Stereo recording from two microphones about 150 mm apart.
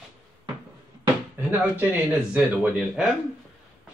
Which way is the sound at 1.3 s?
10° right (ahead or behind).